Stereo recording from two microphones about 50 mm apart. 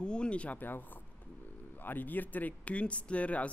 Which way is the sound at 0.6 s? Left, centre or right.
Left.